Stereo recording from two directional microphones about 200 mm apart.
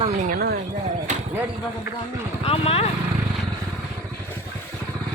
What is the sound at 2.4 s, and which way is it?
Speech, 30° left (ahead or behind).